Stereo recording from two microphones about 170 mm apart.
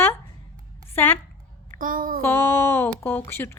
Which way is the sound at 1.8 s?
55° right (ahead or behind).